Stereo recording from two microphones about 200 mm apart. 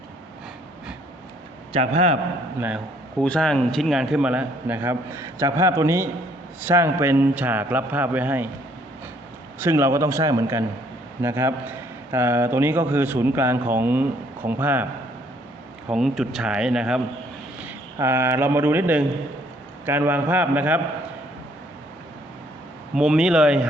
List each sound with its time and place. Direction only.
1.7 s a man's voice: 30° right (ahead or behind)
2.6 s a man's voice: 5° right (ahead or behind)
3.2 s a man's voice: 5° left (ahead or behind)
9.6 s a man's voice: 15° right (ahead or behind)
15.9 s a man's voice: centre (ahead or behind)
23.0 s speech: 5° right (ahead or behind)